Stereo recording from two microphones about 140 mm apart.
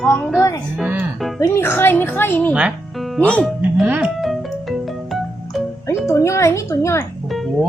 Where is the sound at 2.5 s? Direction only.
5° right (ahead or behind).